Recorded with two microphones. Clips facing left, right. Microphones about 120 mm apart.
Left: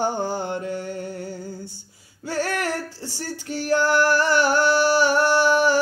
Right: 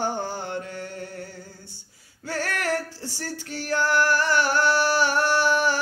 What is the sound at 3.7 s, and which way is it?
Music, 15° left (ahead or behind).